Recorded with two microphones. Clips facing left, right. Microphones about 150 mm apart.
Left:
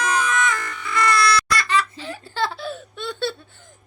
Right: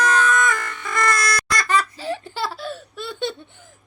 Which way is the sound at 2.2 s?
10° right (ahead or behind).